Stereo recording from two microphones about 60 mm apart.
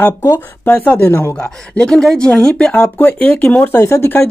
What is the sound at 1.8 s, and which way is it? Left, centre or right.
Speech, centre.